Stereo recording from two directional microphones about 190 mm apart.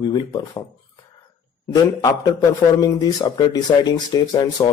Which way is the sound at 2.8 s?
20° left (ahead or behind).